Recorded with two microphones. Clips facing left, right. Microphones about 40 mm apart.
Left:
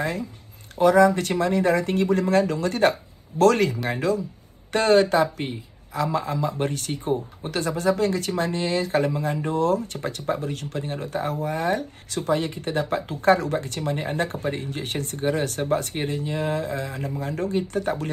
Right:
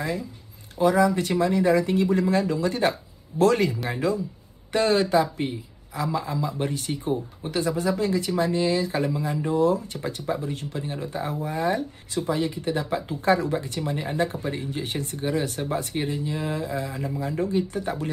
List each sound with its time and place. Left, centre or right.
0.0 s speech: left
4.7 s speech: left
6.9 s speech: centre
7.5 s speech: left
10.9 s speech: left
15.1 s speech: left
15.4 s speech: left